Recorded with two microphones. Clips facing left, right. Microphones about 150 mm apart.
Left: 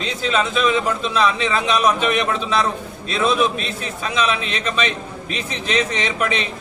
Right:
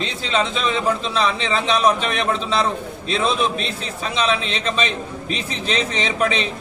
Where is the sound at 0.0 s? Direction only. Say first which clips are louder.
Left 1 dB; 30° right (ahead or behind).